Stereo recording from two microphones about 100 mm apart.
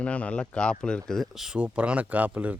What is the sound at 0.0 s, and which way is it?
Speech, 15° left (ahead or behind).